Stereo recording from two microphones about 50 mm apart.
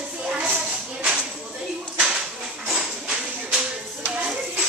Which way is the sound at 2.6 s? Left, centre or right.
Centre.